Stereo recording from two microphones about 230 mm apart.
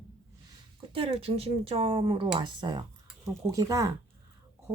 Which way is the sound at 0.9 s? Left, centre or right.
Right.